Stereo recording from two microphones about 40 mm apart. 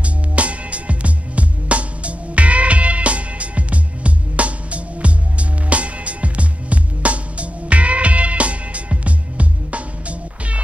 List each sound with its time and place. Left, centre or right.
0.0 s music: right